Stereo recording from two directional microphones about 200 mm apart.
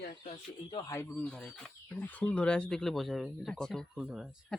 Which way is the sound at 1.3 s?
5° left (ahead or behind).